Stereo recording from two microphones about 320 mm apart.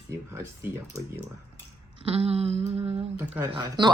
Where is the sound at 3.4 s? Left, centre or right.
Centre.